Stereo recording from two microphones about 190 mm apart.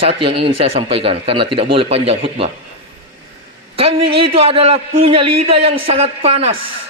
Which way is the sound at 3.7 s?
30° right (ahead or behind).